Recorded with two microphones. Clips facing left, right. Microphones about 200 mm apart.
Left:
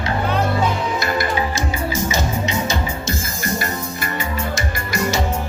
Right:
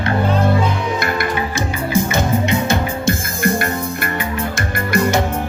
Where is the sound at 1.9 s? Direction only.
55° right (ahead or behind).